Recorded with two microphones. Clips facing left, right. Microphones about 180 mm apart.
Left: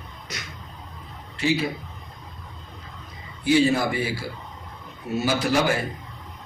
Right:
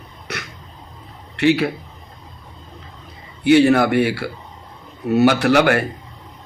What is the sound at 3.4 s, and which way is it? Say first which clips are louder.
A man's voice: right 7 dB; 65° right (ahead or behind).